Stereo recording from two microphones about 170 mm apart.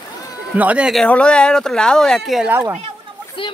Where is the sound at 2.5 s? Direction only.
10° right (ahead or behind).